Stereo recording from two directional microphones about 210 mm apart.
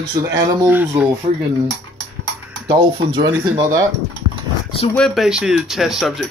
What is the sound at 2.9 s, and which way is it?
Speech, 25° right (ahead or behind).